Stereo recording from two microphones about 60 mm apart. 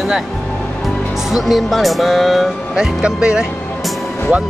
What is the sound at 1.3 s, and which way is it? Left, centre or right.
Speech, centre.